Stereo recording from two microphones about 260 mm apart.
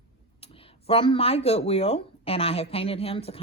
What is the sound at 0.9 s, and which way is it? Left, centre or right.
Speech, left.